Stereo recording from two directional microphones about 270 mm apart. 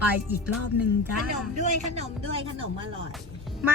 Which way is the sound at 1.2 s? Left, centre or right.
Right.